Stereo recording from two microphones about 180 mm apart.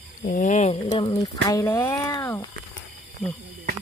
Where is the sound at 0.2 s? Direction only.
45° left (ahead or behind).